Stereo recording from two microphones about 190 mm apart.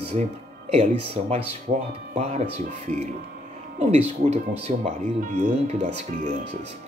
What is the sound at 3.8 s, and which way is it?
Speech, 35° right (ahead or behind).